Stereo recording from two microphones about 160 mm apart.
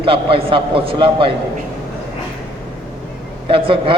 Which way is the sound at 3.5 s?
35° right (ahead or behind).